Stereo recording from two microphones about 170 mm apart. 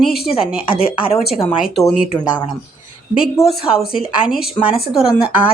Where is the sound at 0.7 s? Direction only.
30° left (ahead or behind).